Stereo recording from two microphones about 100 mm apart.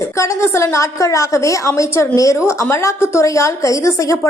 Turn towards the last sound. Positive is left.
turn(degrees=35)  # may be behind; listen again after turning